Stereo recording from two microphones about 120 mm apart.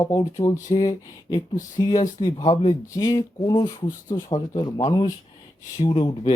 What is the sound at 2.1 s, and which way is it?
Speech, 35° left (ahead or behind).